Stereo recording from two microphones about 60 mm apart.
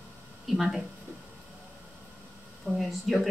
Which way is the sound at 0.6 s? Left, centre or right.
Centre.